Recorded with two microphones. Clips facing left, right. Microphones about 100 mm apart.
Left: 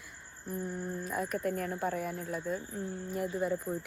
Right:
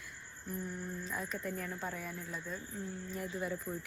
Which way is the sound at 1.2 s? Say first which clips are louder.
Left 7 dB; 55° left (ahead or behind).